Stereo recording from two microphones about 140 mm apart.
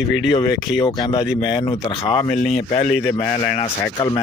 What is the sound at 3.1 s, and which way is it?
Speech, 15° left (ahead or behind).